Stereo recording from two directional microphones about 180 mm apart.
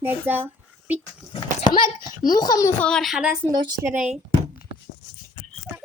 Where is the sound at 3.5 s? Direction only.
25° right (ahead or behind).